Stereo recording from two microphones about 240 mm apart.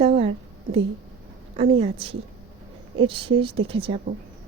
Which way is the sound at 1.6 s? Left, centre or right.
Right.